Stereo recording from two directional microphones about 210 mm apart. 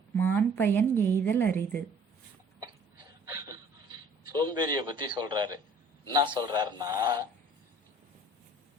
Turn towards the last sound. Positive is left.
turn(degrees=-15)  # may be behind; listen again after turning